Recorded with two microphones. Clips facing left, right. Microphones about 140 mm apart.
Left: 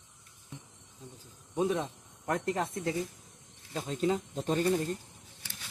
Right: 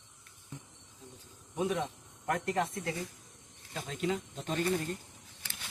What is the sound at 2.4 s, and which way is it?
Speech, 30° left (ahead or behind).